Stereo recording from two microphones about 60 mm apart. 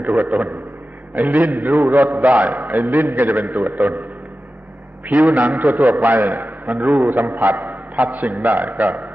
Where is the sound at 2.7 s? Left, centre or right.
Right.